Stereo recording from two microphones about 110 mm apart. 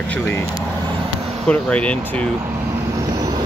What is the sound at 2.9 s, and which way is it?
Vehicle, 35° right (ahead or behind).